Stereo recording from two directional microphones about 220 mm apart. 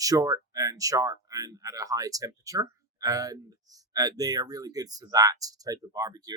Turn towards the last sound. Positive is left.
turn(degrees=-15)  # may be behind; listen again after turning